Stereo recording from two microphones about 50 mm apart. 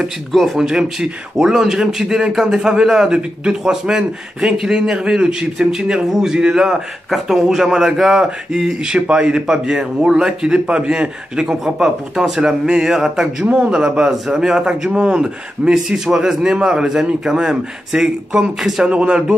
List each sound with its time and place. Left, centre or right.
0.3 s speech: centre
0.6 s speech: centre
18.9 s speech: right